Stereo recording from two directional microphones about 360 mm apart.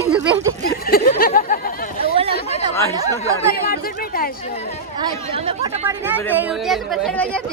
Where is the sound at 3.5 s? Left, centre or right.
Left.